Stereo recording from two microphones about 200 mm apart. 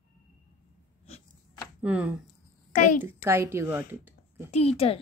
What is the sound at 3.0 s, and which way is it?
Speech, 10° right (ahead or behind).